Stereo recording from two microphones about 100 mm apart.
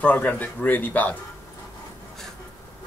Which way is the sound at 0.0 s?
15° left (ahead or behind).